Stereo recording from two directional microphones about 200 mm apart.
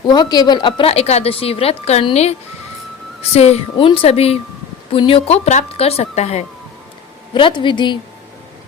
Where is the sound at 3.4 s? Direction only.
30° left (ahead or behind).